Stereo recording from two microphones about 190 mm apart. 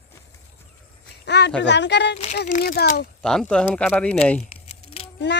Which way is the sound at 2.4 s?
45° left (ahead or behind).